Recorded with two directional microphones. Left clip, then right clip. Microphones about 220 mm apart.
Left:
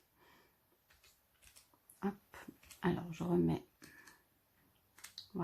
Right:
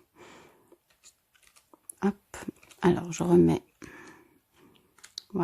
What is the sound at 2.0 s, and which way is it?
Speech, 45° right (ahead or behind).